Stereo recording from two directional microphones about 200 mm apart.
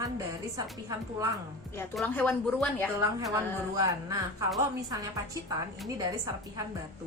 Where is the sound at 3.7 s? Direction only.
15° right (ahead or behind).